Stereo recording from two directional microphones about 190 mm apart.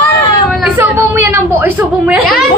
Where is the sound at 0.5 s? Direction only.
10° right (ahead or behind).